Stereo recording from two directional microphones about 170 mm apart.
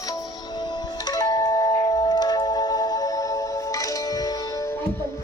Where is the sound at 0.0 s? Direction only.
25° left (ahead or behind).